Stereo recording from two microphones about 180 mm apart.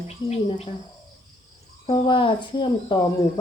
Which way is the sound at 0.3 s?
35° left (ahead or behind).